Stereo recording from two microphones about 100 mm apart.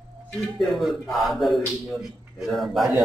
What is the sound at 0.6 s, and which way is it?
A man's voice, centre (ahead or behind).